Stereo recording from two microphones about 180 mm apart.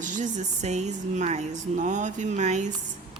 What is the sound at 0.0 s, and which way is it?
Speech, 45° right (ahead or behind).